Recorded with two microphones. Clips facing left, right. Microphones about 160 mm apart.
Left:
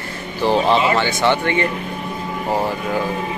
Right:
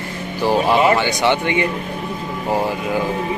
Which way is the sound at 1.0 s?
15° right (ahead or behind).